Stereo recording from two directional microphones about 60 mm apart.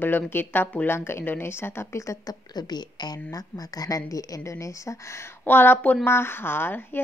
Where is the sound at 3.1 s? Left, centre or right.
Left.